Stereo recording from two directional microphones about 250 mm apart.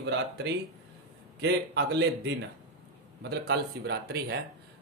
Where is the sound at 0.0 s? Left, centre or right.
Right.